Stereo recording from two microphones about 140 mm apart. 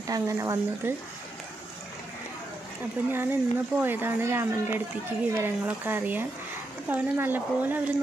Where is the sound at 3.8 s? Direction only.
15° right (ahead or behind).